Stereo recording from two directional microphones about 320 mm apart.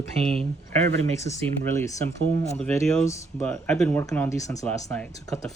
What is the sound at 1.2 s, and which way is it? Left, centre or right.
Speech, centre.